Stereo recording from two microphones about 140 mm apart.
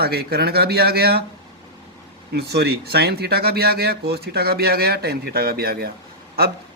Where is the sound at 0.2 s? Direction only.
90° right.